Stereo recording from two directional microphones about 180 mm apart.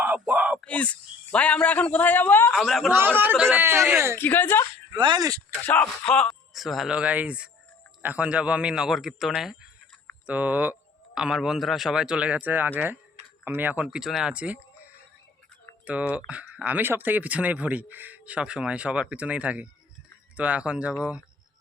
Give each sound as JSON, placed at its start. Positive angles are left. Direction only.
{"t": 0.0, "sound": "a sound", "side_deg": -10}
{"t": 0.6, "sound": "a man's voice", "side_deg": 5}
{"t": 3.2, "sound": "speech", "side_deg": -10}
{"t": 4.2, "sound": "a woman's voice", "side_deg": 10}
{"t": 4.9, "sound": "speech", "side_deg": -25}
{"t": 5.6, "sound": "speech", "side_deg": 10}
{"t": 15.9, "sound": "speech", "side_deg": -5}